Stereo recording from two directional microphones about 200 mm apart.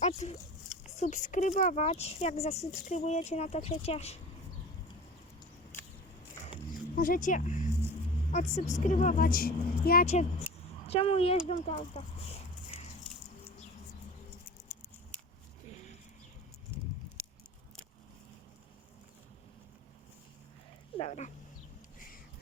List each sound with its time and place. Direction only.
0.0 s speech: 35° left (ahead or behind)
6.9 s a woman's voice: 45° left (ahead or behind)
10.5 s a sound: 10° right (ahead or behind)
10.8 s a woman's voice: 30° left (ahead or behind)
15.7 s bird: 35° left (ahead or behind)
16.7 s a sound: 10° right (ahead or behind)
21.0 s speech: 35° left (ahead or behind)